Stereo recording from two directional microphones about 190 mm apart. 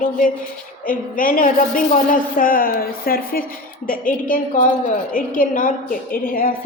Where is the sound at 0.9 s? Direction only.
45° left (ahead or behind).